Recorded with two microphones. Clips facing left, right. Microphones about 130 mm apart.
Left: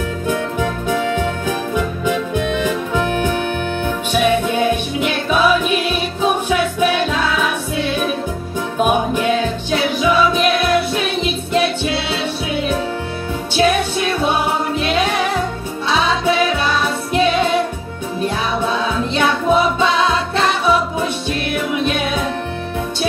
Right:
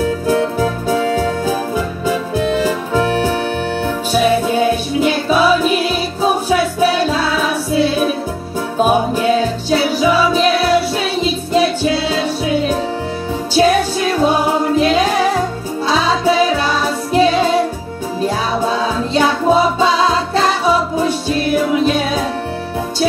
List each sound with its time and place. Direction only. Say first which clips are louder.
0.0 s music: right 5 dB; 35° right (ahead or behind)